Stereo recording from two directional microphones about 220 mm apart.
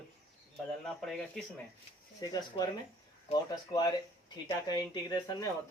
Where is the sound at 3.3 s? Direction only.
30° left (ahead or behind).